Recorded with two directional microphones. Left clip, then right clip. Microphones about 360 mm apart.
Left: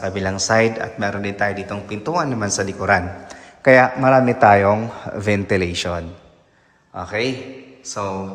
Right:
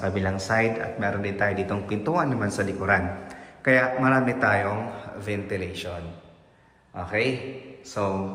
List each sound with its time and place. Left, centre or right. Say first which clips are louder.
0.0 s a man's voice: left 5 dB; centre; by 5.9 s left
6.9 s speech: left 3 dB; centre